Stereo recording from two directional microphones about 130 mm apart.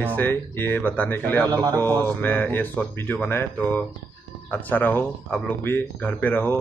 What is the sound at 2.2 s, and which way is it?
Speech, 15° left (ahead or behind).